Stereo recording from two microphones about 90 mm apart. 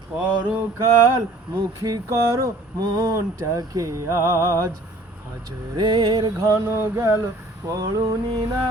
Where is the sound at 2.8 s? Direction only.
50° right (ahead or behind).